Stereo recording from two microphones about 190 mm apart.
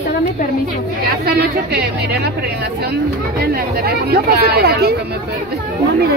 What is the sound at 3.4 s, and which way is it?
Speech, 55° right (ahead or behind).